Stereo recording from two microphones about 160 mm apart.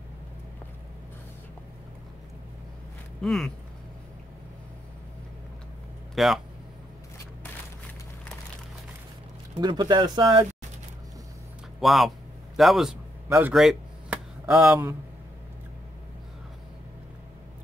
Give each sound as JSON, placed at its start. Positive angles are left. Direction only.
{"t": 3.2, "sound": "speech", "side_deg": 5}
{"t": 6.1, "sound": "speech", "side_deg": 0}
{"t": 9.6, "sound": "speech", "side_deg": -25}
{"t": 11.8, "sound": "speech", "side_deg": 0}
{"t": 12.5, "sound": "a sound", "side_deg": 0}